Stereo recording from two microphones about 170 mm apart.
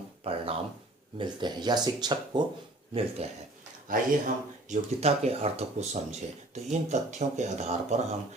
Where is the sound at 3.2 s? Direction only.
35° right (ahead or behind).